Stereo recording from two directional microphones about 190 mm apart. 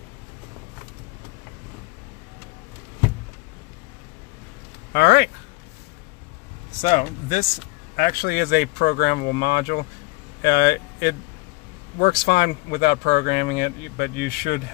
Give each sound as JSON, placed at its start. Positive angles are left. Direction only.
{"t": 4.9, "sound": "speech", "side_deg": 60}
{"t": 6.8, "sound": "speech", "side_deg": 40}
{"t": 7.9, "sound": "speech", "side_deg": 50}